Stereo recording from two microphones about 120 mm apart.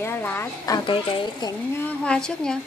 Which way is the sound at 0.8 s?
45° left (ahead or behind).